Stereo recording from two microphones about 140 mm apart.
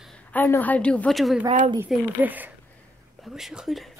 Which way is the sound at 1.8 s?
10° right (ahead or behind).